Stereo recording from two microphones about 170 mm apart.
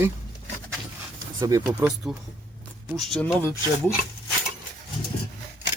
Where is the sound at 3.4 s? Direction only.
15° left (ahead or behind).